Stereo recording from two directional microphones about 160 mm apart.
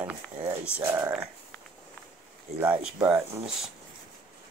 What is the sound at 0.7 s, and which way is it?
Speech, 15° right (ahead or behind).